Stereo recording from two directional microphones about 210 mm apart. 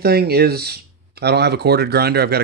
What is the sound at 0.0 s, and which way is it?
Speech, 50° right (ahead or behind).